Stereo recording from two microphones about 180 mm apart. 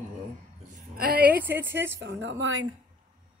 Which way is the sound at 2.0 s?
90° right.